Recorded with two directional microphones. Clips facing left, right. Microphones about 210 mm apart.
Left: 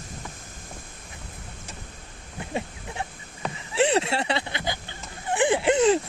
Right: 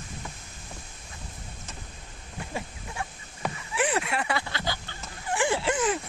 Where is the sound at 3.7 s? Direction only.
25° left (ahead or behind).